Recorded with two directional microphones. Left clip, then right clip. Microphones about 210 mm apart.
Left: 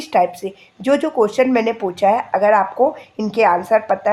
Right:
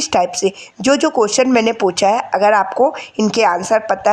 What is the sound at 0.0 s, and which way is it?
Speech, 30° right (ahead or behind).